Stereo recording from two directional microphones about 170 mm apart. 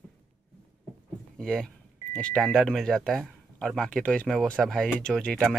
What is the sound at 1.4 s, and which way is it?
Speech, 5° left (ahead or behind).